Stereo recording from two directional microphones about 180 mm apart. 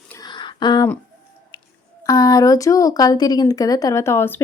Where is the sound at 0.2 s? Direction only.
25° left (ahead or behind).